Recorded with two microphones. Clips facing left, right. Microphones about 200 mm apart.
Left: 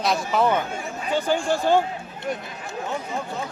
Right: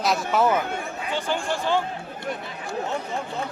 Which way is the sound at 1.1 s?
45° left (ahead or behind).